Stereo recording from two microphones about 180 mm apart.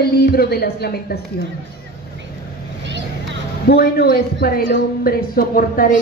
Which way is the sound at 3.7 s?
60° left (ahead or behind).